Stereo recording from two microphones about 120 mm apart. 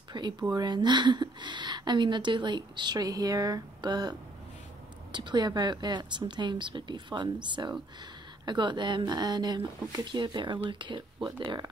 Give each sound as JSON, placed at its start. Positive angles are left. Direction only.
{"t": 0.1, "sound": "speech", "side_deg": -35}
{"t": 5.1, "sound": "speech", "side_deg": -40}
{"t": 8.5, "sound": "speech", "side_deg": -40}